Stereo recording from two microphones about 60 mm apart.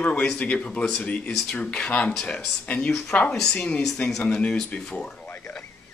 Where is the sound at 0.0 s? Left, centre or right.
Left.